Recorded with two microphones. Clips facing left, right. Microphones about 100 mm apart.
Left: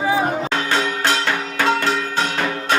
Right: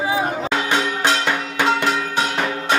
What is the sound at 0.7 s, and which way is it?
Music, 15° right (ahead or behind).